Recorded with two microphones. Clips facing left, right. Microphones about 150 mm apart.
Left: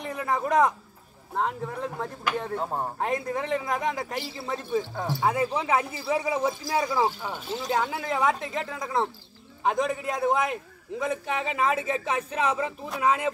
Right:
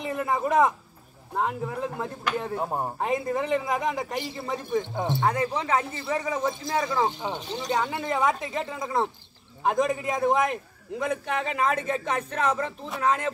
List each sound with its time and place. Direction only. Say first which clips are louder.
0.0 s a man's voice: right 2 dB; centre (ahead or behind)
3.0 s a man's voice: right 2 dB; centre (ahead or behind)
4.9 s speech: right 3 dB; 20° right (ahead or behind)
5.2 s a man's voice: left 2 dB; 5° left (ahead or behind)